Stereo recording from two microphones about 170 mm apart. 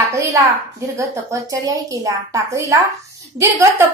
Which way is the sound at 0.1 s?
15° right (ahead or behind).